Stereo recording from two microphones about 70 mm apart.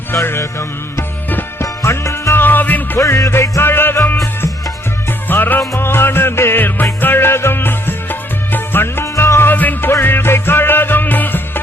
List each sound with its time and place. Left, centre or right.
0.1 s music: left
1.6 s music: left
2.3 s music: left
3.0 s music: left
3.6 s music: left
5.3 s music: left